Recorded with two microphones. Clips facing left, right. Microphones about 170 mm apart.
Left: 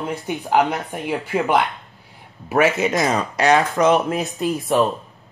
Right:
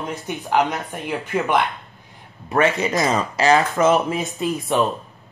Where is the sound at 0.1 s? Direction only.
15° left (ahead or behind).